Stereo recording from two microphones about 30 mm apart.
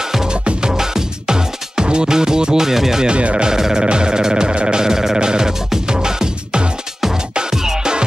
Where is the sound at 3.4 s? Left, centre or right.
Centre.